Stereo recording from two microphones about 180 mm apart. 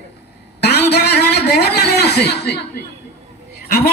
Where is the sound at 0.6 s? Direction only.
65° left (ahead or behind).